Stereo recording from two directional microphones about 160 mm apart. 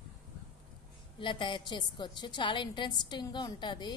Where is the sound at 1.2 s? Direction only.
30° left (ahead or behind).